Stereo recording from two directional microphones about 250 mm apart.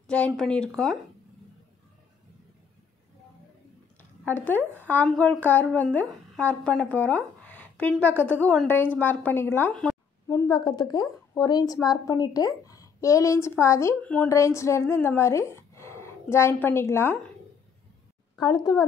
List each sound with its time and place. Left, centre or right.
0.0 s speech: centre
4.2 s speech: centre
10.3 s a woman's voice: centre
18.4 s a woman's voice: centre